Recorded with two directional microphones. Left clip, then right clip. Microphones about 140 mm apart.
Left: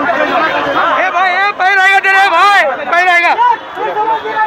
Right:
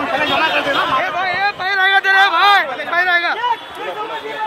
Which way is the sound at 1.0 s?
10° right (ahead or behind).